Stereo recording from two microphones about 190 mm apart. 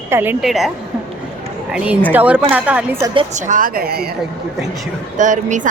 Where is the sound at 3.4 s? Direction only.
45° right (ahead or behind).